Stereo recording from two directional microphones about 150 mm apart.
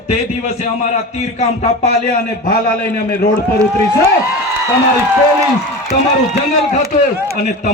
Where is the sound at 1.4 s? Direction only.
50° left (ahead or behind).